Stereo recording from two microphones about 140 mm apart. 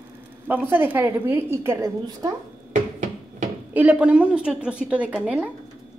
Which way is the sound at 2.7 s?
60° right (ahead or behind).